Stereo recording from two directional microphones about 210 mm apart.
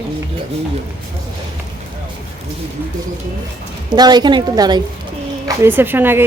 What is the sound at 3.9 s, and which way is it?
Speech, 20° right (ahead or behind).